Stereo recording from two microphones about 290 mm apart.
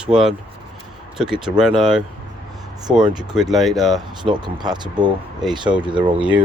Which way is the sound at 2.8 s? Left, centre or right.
Centre.